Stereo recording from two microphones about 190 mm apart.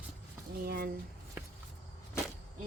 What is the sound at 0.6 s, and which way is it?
Speech, 55° right (ahead or behind).